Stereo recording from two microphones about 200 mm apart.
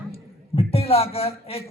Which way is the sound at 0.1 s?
30° left (ahead or behind).